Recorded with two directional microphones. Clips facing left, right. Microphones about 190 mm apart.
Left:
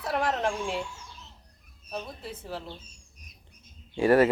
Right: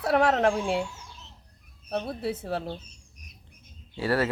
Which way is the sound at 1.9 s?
65° right (ahead or behind).